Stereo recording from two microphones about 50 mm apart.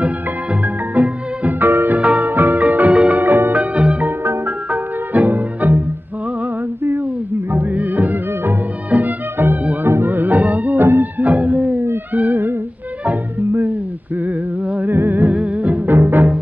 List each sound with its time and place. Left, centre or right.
0.9 s music: right
1.6 s music: right
2.0 s music: right
2.2 s music: right
3.2 s music: right
3.5 s music: right
7.5 s music: right
12.1 s humming: right
14.9 s music: right
15.3 s music: right
15.9 s music: right